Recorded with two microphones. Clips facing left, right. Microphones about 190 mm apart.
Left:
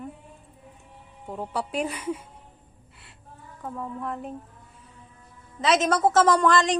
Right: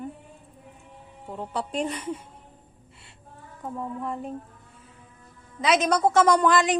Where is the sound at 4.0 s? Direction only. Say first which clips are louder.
Right 1 dB; centre (ahead or behind).